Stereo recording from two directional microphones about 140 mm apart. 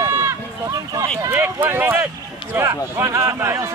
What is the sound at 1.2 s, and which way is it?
Speech, 15° right (ahead or behind).